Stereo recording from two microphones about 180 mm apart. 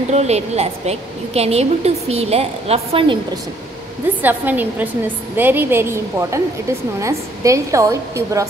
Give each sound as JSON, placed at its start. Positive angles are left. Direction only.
{"t": 0.1, "sound": "a woman's voice", "side_deg": -35}
{"t": 4.2, "sound": "a woman's voice", "side_deg": -10}